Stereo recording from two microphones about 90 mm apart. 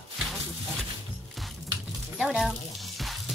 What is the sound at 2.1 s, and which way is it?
Speech, centre (ahead or behind).